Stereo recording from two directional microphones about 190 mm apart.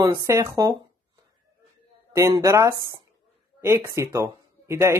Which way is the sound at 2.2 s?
15° right (ahead or behind).